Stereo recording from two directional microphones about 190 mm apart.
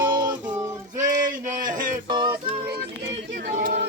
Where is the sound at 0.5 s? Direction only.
15° right (ahead or behind).